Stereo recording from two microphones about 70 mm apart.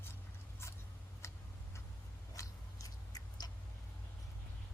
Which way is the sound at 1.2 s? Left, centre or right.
Left.